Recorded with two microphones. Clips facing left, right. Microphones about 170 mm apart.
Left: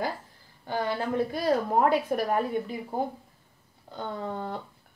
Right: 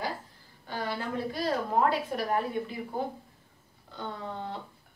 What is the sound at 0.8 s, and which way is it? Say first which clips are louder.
A woman's voice: left 4 dB; 50° left (ahead or behind).